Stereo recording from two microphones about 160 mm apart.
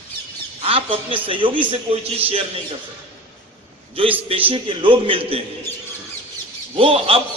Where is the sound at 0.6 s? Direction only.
35° right (ahead or behind).